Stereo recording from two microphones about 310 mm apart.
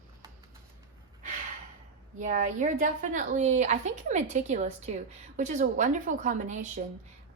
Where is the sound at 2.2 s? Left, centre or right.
Right.